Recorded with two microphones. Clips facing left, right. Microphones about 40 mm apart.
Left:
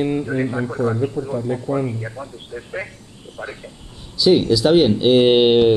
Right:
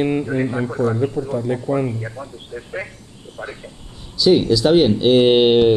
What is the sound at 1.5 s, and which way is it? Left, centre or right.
Speech, right.